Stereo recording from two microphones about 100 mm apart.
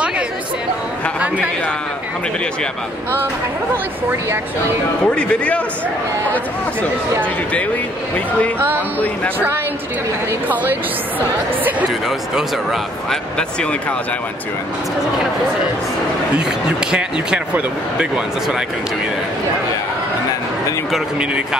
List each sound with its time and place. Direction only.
5.0 s speech: 10° left (ahead or behind)
8.5 s music: 20° right (ahead or behind)
10.5 s speech: 15° right (ahead or behind)
13.1 s speech: 10° left (ahead or behind)
16.9 s speech: 10° right (ahead or behind)